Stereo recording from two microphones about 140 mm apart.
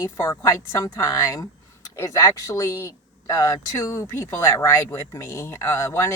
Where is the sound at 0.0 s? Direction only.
25° left (ahead or behind).